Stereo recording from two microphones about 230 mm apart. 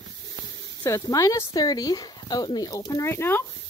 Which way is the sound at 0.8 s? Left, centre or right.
Centre.